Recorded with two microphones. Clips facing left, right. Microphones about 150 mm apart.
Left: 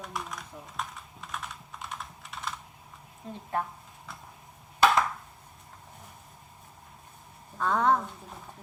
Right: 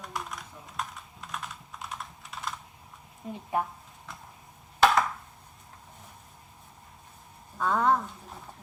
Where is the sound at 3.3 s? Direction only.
10° right (ahead or behind).